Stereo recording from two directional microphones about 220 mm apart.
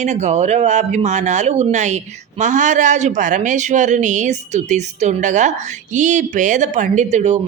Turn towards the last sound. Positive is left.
turn(degrees=-30)  # may be behind; listen again after turning